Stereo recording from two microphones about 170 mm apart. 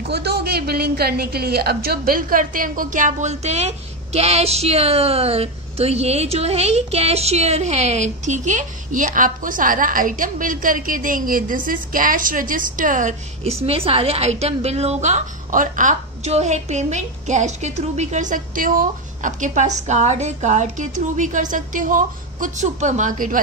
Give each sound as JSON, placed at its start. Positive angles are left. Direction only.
{"t": 0.1, "sound": "a woman's voice", "side_deg": -70}